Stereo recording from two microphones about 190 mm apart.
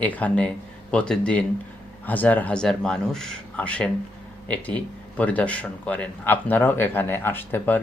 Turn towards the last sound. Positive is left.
turn(degrees=10)  # may be behind; listen again after turning